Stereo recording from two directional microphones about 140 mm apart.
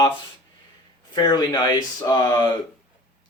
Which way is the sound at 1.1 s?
30° left (ahead or behind).